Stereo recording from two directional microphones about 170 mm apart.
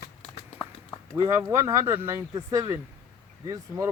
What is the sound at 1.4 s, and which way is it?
Speech, 15° right (ahead or behind).